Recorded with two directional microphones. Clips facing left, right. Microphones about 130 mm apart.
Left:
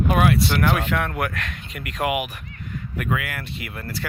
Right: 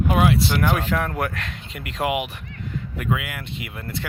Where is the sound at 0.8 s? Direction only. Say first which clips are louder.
Even; 30° right (ahead or behind).